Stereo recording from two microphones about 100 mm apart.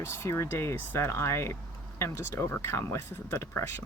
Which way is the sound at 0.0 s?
25° left (ahead or behind).